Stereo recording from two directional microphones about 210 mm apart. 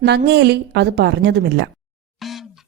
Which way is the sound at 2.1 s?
Centre (ahead or behind).